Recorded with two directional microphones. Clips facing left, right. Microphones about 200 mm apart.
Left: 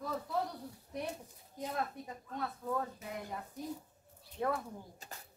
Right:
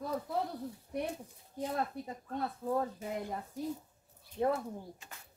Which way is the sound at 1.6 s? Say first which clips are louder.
Right 3 dB; 30° right (ahead or behind).